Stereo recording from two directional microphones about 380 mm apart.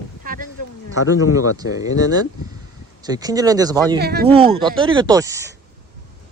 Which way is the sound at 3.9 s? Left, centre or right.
Right.